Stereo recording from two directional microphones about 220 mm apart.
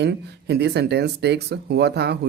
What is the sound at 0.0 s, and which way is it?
Speech, 50° right (ahead or behind).